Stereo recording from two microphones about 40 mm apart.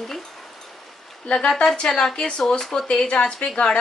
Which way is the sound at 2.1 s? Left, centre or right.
Left.